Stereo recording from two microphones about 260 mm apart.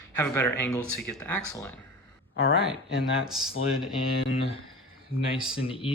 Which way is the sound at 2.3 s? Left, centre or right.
Left.